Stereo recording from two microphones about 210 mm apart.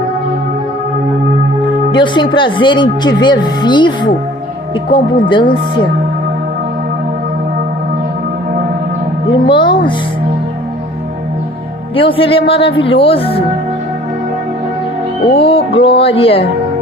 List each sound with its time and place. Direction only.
1.9 s speech: 20° left (ahead or behind)
9.5 s speech: 20° left (ahead or behind)
11.9 s speech: 25° left (ahead or behind)
15.3 s speech: 25° left (ahead or behind)